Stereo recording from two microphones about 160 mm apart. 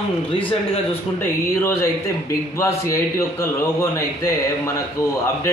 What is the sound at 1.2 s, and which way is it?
Speech, 15° left (ahead or behind).